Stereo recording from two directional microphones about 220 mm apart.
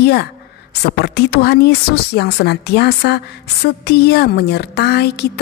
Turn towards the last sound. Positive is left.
turn(degrees=50)  # may be behind; listen again after turning